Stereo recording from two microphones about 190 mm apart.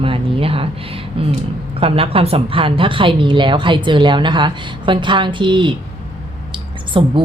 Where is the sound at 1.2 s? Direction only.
30° right (ahead or behind).